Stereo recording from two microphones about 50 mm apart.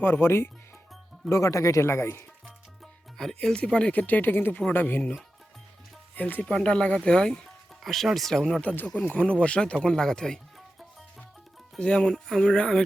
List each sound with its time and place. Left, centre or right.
0.0 s speech: left
1.3 s speech: left
2.8 s music: centre
3.6 s speech: left
4.0 s speech: left
6.1 s speech: left
6.5 s speech: centre
7.8 s speech: centre
9.0 s speech: left
9.7 s speech: centre
11.8 s speech: centre
12.1 s speech: centre
12.5 s speech: centre